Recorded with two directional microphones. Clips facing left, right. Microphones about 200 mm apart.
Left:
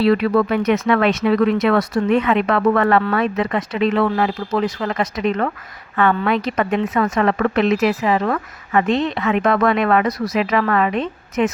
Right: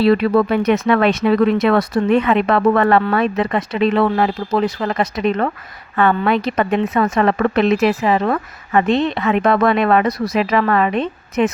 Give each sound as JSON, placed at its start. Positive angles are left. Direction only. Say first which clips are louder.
{"t": 0.0, "sound": "speech", "louder": "right 2 dB", "side_deg": -30}